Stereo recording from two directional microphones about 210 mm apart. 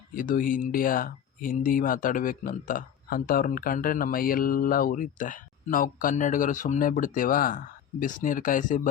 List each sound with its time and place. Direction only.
0.1 s speech: 40° left (ahead or behind)